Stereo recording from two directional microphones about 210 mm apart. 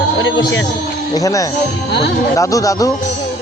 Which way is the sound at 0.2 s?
65° left (ahead or behind).